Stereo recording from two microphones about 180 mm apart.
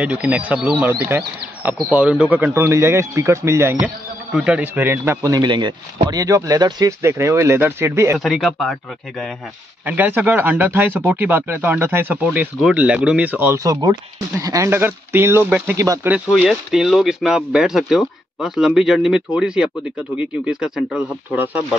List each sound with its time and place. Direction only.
0.0 s speech: 5° right (ahead or behind)
8.2 s speech: centre (ahead or behind)
9.8 s speech: 10° right (ahead or behind)